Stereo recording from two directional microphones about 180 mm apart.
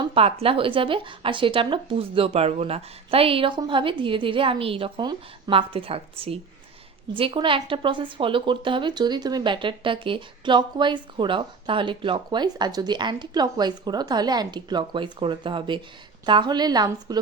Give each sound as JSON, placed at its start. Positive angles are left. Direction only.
{"t": 0.0, "sound": "a woman's voice", "side_deg": -30}